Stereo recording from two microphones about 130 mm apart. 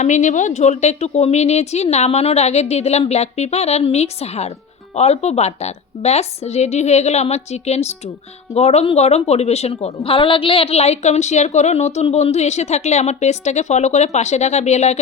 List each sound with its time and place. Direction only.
0.0 s a woman's voice: 70° left (ahead or behind)